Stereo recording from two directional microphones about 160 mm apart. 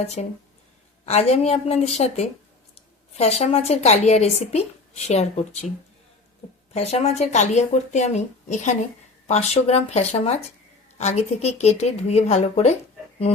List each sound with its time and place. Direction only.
0.0 s a woman's voice: 45° left (ahead or behind)
6.7 s a woman's voice: 40° left (ahead or behind)